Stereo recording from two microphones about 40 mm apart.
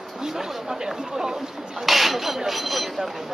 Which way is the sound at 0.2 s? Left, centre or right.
Centre.